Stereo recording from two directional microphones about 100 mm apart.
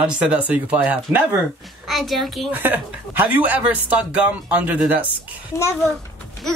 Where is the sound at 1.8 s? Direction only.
Centre (ahead or behind).